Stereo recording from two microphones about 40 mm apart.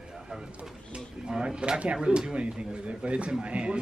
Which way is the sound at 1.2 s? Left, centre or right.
Right.